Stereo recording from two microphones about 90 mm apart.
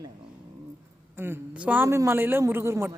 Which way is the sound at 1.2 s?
20° right (ahead or behind).